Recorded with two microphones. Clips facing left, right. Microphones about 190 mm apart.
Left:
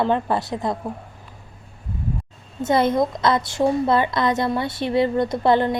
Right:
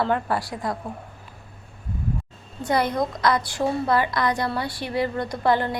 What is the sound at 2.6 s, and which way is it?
A woman's voice, 25° left (ahead or behind).